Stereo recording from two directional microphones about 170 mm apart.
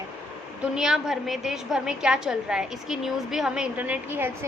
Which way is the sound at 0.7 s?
5° right (ahead or behind).